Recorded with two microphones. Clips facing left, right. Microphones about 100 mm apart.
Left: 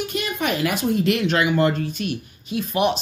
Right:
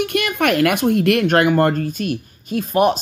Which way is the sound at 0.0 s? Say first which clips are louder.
Right 6 dB; 60° right (ahead or behind).